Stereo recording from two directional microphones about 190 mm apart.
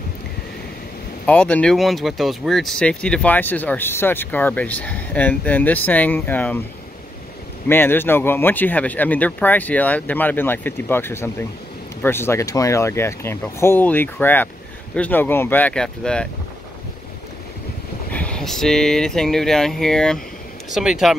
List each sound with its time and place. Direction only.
1.2 s speech: 5° left (ahead or behind)
7.6 s speech: 10° left (ahead or behind)
18.1 s speech: 5° left (ahead or behind)